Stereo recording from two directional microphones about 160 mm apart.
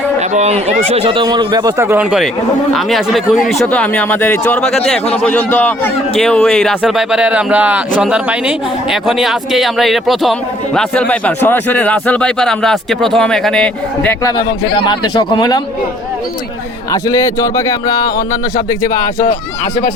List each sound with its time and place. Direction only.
0.2 s speech: 45° right (ahead or behind); by 2.0 s 15° right (ahead or behind)
2.0 s speech: centre (ahead or behind)
14.3 s a man's voice: 25° left (ahead or behind)
16.9 s a man's voice: 20° left (ahead or behind)